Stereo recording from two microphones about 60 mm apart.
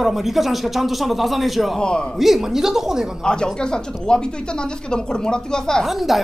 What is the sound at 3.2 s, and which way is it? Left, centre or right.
Speech, centre.